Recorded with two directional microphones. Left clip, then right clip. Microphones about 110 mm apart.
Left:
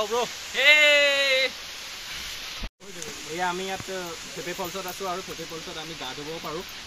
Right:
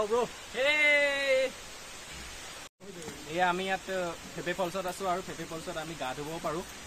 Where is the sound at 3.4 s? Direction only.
45° right (ahead or behind).